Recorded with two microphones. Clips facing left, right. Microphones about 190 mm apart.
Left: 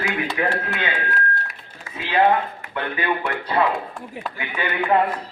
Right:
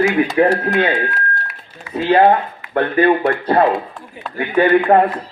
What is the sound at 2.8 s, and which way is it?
Speech, 55° right (ahead or behind).